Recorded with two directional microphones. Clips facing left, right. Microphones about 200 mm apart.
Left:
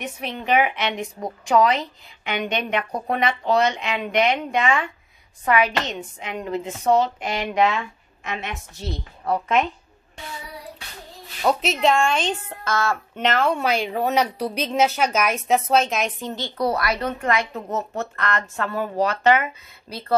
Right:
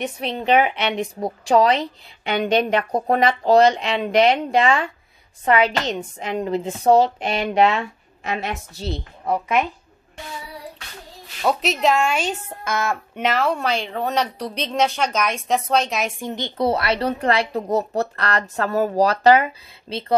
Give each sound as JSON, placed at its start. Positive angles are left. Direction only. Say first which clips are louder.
{"t": 0.0, "sound": "a woman's voice", "louder": "right 5 dB", "side_deg": -35}
{"t": 9.2, "sound": "a woman's voice", "louder": "even", "side_deg": -15}
{"t": 11.4, "sound": "a woman's voice", "louder": "even", "side_deg": 0}
{"t": 13.2, "sound": "a woman's voice", "louder": "even", "side_deg": -5}
{"t": 16.2, "sound": "a woman's voice", "louder": "right 2 dB", "side_deg": -15}
{"t": 19.9, "sound": "speech", "louder": "right 2 dB", "side_deg": -25}